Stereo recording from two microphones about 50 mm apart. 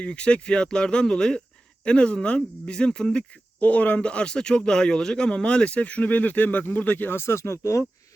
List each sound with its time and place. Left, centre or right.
0.0 s speech: left
3.6 s speech: left
7.2 s speech: left